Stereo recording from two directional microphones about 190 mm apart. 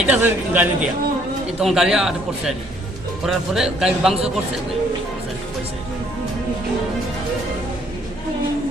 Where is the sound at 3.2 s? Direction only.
Centre (ahead or behind).